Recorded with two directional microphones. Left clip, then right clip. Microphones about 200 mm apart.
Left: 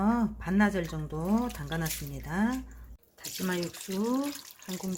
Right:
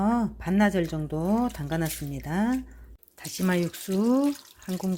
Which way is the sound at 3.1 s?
40° right (ahead or behind).